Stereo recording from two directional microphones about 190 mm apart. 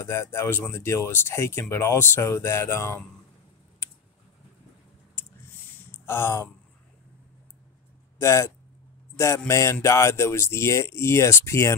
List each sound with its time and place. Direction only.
0.0 s speech: 15° left (ahead or behind)
6.0 s speech: 15° left (ahead or behind)
8.2 s speech: 15° left (ahead or behind)